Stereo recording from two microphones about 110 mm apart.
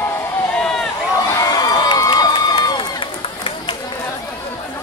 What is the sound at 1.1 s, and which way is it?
Crowd, 35° left (ahead or behind).